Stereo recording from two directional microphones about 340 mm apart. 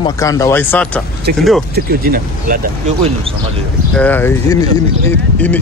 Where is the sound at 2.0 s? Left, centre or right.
Right.